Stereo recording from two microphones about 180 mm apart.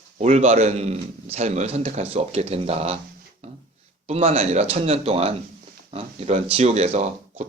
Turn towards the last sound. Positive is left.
turn(degrees=-40)  # may be behind; listen again after turning